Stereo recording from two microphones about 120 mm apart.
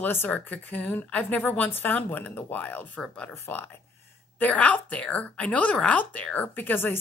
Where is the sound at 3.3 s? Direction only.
20° left (ahead or behind).